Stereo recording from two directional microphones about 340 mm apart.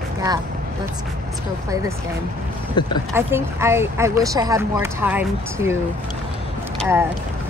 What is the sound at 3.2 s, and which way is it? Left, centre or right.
Speech, centre.